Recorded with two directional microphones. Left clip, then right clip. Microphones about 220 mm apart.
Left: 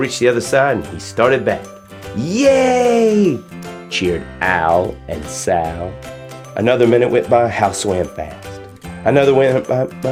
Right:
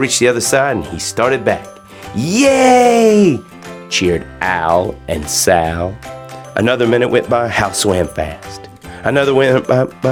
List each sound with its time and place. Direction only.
0.0 s speech: 25° right (ahead or behind)